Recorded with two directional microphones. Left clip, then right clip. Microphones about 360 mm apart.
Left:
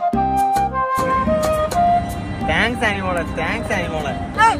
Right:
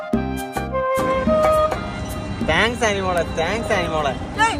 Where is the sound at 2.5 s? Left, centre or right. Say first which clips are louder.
Even; right.